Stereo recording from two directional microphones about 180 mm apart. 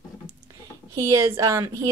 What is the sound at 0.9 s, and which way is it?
Speech, 15° right (ahead or behind).